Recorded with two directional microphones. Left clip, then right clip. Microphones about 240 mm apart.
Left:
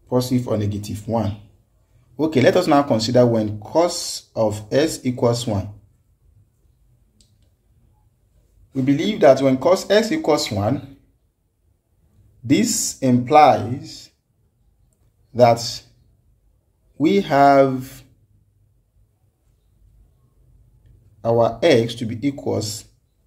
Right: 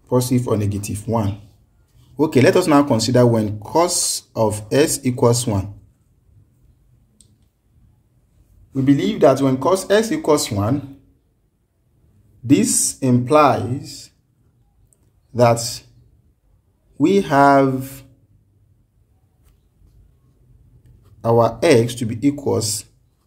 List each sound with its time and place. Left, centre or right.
0.0 s speech: right
8.8 s speech: centre
12.4 s speech: centre
16.9 s speech: centre
21.2 s speech: right